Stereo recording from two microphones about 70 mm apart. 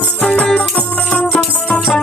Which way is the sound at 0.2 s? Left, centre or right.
Centre.